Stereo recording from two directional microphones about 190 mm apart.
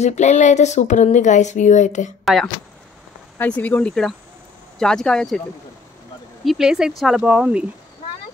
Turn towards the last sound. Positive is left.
turn(degrees=-5)  # may be behind; listen again after turning